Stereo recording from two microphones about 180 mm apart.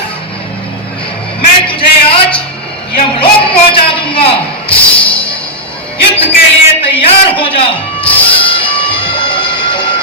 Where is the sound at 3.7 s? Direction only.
30° left (ahead or behind).